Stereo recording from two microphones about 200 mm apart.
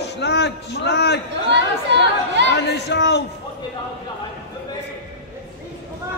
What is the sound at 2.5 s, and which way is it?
Speech, 60° left (ahead or behind).